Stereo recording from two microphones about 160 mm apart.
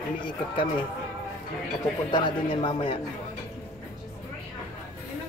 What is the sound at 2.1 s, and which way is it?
Speech, 30° left (ahead or behind).